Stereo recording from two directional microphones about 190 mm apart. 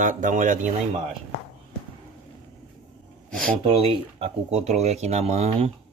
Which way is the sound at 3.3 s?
5° left (ahead or behind).